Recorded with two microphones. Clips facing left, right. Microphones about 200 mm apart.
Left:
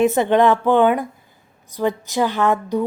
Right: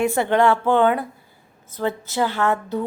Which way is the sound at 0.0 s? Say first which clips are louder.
Left 3 dB; 20° left (ahead or behind).